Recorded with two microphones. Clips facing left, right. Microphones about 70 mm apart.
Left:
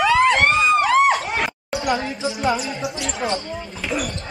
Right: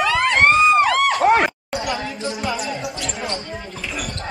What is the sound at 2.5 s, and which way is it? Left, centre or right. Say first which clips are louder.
Speech: left 1 dB; centre.